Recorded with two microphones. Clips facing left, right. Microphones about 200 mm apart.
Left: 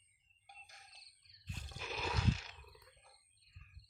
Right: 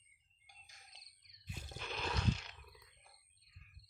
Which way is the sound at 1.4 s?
10° right (ahead or behind).